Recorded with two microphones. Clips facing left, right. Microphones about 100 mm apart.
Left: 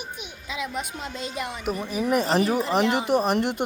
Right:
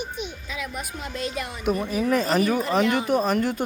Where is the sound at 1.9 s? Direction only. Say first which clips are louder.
Left 2 dB; 15° left (ahead or behind).